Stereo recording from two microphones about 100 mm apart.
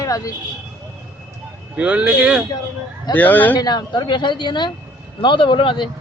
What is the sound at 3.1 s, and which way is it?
Speech, 15° left (ahead or behind).